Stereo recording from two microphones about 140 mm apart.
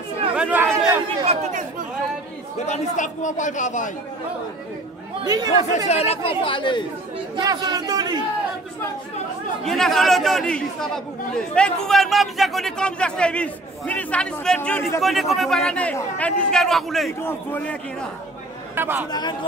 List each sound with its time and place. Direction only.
0.4 s chatter: 10° right (ahead or behind)
1.2 s speech: 45° right (ahead or behind)
2.6 s a man's voice: 55° left (ahead or behind)
5.2 s speech: 30° right (ahead or behind)
5.9 s speech: 50° left (ahead or behind)
7.3 s speech: 25° right (ahead or behind)
9.7 s a man's voice: centre (ahead or behind)
17.2 s a man's voice: 15° left (ahead or behind)
18.8 s speech: 15° right (ahead or behind)
19.0 s speech: 30° left (ahead or behind)